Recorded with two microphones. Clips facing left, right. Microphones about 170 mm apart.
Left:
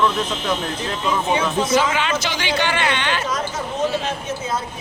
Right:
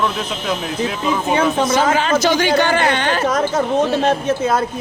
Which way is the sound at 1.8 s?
40° right (ahead or behind).